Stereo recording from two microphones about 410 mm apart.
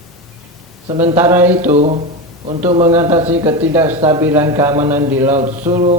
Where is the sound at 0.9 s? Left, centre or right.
Centre.